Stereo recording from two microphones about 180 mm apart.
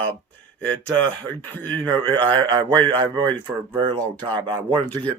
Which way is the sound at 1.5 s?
10° left (ahead or behind).